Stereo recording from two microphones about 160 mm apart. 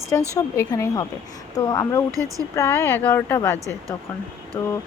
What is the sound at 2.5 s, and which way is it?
A woman's voice, 15° left (ahead or behind).